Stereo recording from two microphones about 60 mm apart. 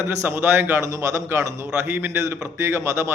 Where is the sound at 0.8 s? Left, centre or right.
Right.